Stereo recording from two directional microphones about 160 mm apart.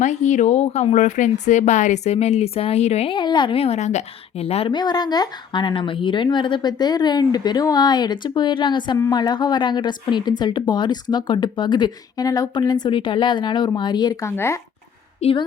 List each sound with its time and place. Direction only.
0.0 s a woman's voice: 45° left (ahead or behind)
4.7 s a woman's voice: 25° left (ahead or behind)
15.2 s a woman's voice: 35° left (ahead or behind)